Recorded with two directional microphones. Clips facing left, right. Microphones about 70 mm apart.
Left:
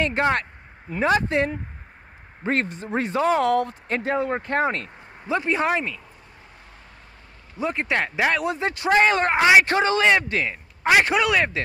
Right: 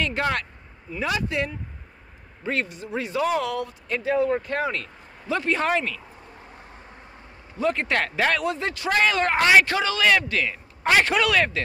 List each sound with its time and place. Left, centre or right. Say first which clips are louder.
0.0 s speech: left 3 dB; left
7.5 s speech: right 1 dB; centre
9.7 s speech: left 2 dB; left